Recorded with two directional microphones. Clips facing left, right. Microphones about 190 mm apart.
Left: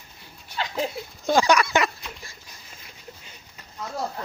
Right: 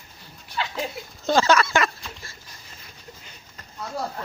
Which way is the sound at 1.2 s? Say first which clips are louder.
Even; 15° left (ahead or behind).